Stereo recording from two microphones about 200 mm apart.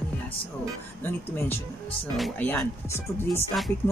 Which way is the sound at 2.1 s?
5° left (ahead or behind).